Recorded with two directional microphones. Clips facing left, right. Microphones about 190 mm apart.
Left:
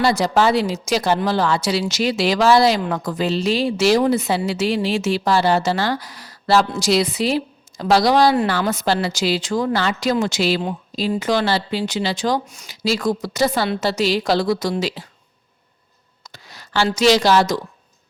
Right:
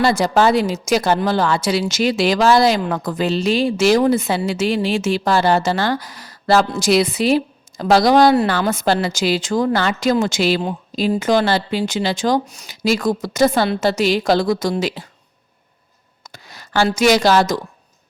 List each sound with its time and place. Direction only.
0.0 s a woman's voice: 50° right (ahead or behind)
16.2 s speech: 50° right (ahead or behind)